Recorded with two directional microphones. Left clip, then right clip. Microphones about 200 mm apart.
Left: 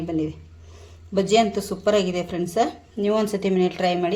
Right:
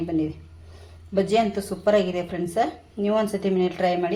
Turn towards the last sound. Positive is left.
turn(degrees=15)  # may be behind; listen again after turning